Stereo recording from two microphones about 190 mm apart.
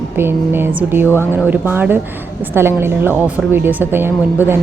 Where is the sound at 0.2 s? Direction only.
10° right (ahead or behind).